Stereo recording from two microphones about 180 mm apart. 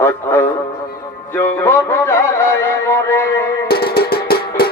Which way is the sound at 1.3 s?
15° left (ahead or behind).